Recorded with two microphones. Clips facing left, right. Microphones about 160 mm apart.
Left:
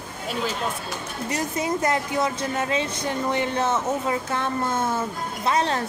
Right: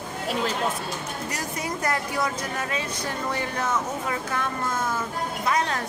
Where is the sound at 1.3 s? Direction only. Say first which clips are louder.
Left 8 dB; 25° left (ahead or behind).